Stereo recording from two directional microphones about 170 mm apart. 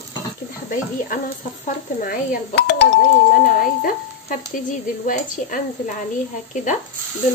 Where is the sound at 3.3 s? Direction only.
55° left (ahead or behind).